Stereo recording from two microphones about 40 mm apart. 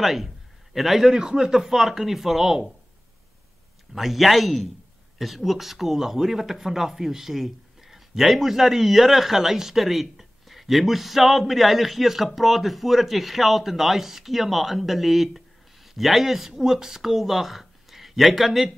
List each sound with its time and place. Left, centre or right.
0.0 s speech: centre
1.1 s speech: centre
3.9 s speech: centre